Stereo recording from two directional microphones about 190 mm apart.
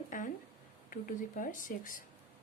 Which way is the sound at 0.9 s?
45° left (ahead or behind).